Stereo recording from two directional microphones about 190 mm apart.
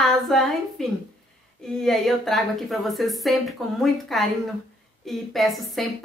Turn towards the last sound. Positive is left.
turn(degrees=0)  # may be behind; listen again after turning